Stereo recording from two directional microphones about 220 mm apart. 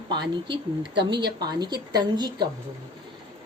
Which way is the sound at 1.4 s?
20° right (ahead or behind).